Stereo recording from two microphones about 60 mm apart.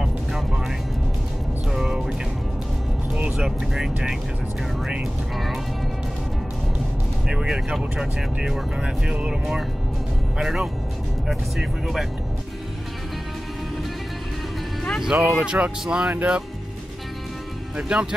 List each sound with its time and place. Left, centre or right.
0.0 s music: centre
3.3 s speech: centre
5.3 s music: centre
7.2 s speech: centre
15.0 s speech: centre
15.3 s speech: centre
17.7 s speech: centre